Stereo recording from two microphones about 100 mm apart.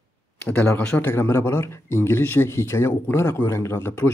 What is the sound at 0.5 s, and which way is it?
A man's voice, 15° left (ahead or behind).